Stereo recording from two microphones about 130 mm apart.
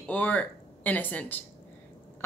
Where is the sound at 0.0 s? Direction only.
10° left (ahead or behind).